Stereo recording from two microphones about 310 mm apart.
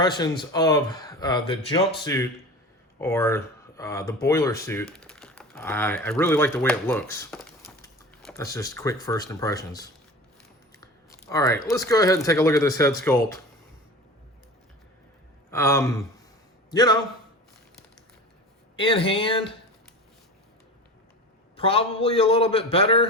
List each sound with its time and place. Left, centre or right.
0.0 s speech: centre
3.0 s speech: centre
15.4 s a sound: centre
16.7 s speech: centre
18.8 s speech: centre
21.5 s speech: centre